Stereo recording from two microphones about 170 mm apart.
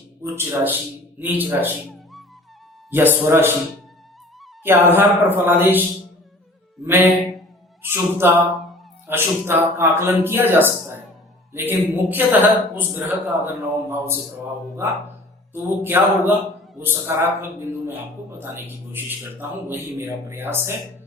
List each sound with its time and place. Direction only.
0.2 s a man's voice: 15° right (ahead or behind)
2.9 s a man's voice: 10° right (ahead or behind)
4.6 s a man's voice: 15° right (ahead or behind)
6.8 s a man's voice: 15° right (ahead or behind)
15.5 s a man's voice: 15° right (ahead or behind)